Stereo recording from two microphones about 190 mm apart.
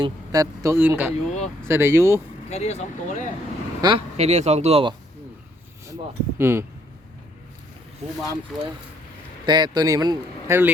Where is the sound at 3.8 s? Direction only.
20° right (ahead or behind).